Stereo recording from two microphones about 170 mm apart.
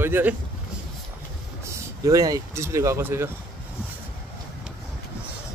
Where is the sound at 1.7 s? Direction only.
20° right (ahead or behind).